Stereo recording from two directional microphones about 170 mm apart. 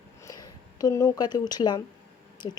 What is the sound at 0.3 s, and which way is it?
Speech, 20° left (ahead or behind).